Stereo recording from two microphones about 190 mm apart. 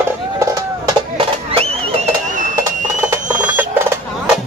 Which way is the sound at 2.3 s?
40° right (ahead or behind).